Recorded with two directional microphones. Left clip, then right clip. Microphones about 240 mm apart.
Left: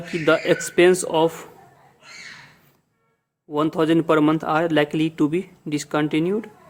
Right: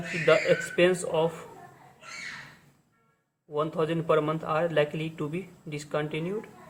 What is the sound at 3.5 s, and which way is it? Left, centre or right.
Speech, left.